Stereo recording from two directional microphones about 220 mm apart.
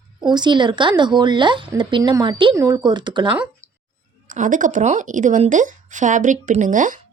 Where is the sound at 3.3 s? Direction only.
5° right (ahead or behind).